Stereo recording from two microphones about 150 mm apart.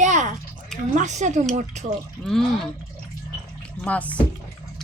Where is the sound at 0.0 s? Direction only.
55° right (ahead or behind).